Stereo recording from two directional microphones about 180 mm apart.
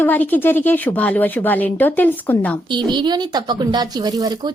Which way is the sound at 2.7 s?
25° right (ahead or behind).